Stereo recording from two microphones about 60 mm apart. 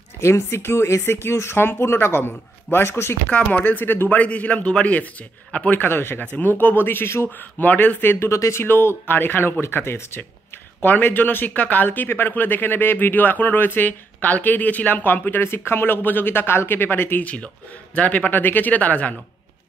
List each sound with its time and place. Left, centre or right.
0.2 s speech: left
3.3 s speech: centre; by 4.2 s left
4.2 s speech: left
5.8 s speech: left
7.3 s speech: left
8.3 s speech: left